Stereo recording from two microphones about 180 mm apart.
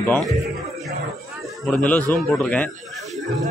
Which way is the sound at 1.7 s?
5° left (ahead or behind).